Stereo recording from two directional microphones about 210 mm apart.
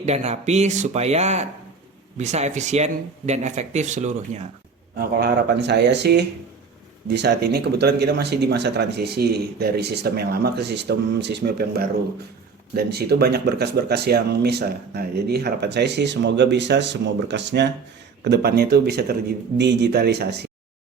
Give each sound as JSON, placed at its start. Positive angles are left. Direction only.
{"t": 0.0, "sound": "speech", "side_deg": -30}
{"t": 4.9, "sound": "speech", "side_deg": -50}